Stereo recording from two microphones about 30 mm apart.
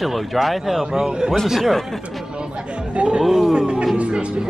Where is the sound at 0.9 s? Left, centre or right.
Right.